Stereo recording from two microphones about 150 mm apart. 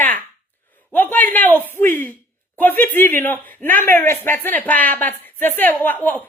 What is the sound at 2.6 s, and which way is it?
Speech, 15° left (ahead or behind).